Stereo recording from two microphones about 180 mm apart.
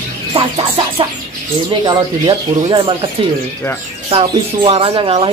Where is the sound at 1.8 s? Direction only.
25° right (ahead or behind).